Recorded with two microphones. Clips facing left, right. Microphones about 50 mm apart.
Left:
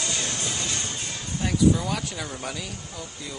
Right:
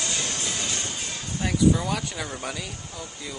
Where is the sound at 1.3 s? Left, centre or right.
Centre.